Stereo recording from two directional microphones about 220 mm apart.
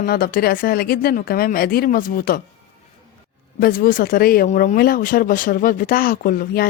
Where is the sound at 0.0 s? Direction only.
40° left (ahead or behind).